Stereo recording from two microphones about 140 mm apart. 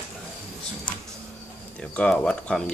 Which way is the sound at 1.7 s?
10° left (ahead or behind).